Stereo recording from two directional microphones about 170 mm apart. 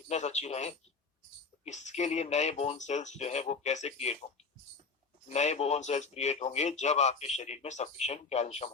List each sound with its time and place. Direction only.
0.1 s speech: 40° left (ahead or behind)
5.3 s speech: 40° left (ahead or behind)